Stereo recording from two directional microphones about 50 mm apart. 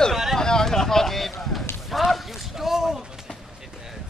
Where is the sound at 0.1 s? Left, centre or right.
Centre.